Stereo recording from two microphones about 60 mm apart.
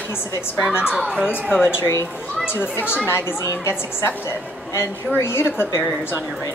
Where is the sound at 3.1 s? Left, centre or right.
Left.